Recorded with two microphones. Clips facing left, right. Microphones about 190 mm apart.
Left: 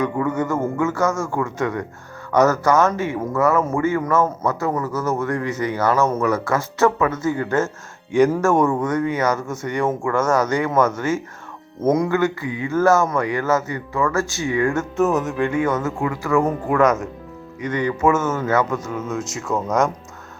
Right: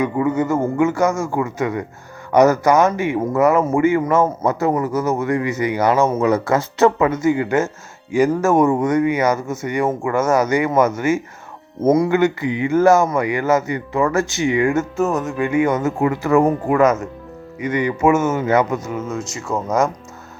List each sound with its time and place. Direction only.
0.0 s a man's voice: 10° right (ahead or behind)
8.1 s a man's voice: 5° right (ahead or behind)
15.0 s speech: 5° left (ahead or behind)
15.4 s a man's voice: 10° right (ahead or behind)
16.6 s a man's voice: 5° right (ahead or behind)
18.9 s speech: centre (ahead or behind)